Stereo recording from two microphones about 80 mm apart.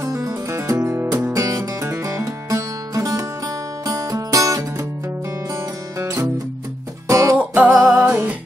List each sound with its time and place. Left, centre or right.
0.0 s music: right
7.3 s music: centre